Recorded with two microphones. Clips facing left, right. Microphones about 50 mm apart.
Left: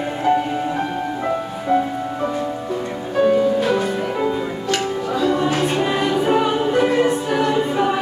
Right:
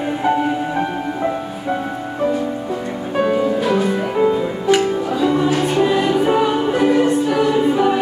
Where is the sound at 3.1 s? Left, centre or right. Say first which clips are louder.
Left 2 dB; centre.